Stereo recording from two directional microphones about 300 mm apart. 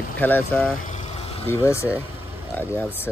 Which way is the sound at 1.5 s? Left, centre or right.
Centre.